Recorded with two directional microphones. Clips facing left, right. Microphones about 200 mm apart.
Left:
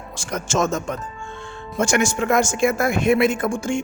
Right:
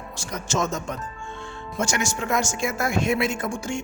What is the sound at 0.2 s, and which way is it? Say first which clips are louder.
Speech: left 6 dB; 90° left.